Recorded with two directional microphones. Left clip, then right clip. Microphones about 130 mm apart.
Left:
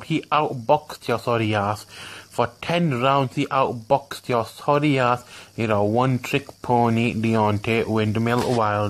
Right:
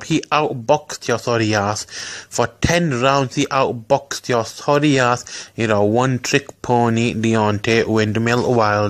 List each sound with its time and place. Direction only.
0.1 s speech: 20° right (ahead or behind)